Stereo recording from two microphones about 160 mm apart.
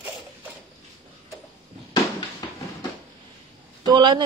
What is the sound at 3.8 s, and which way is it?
Speech, 30° right (ahead or behind).